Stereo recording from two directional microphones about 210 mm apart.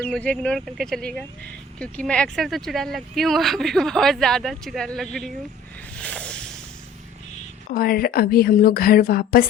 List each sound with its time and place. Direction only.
0.1 s speech: 5° left (ahead or behind)
6.0 s a sound: 5° left (ahead or behind)
7.7 s a woman's voice: 45° left (ahead or behind)